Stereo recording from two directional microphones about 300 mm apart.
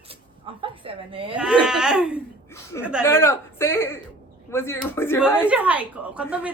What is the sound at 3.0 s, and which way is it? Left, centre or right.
A woman's voice, centre.